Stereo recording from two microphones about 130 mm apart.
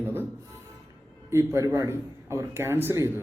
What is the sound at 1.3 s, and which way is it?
Speech, 20° right (ahead or behind).